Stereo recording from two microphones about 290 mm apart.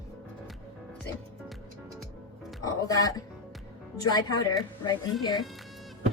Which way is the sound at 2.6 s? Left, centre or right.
Centre.